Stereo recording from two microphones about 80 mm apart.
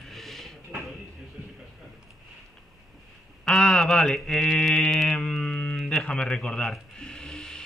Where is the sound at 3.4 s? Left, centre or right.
Centre.